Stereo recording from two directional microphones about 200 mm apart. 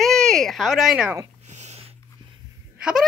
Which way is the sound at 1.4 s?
35° right (ahead or behind).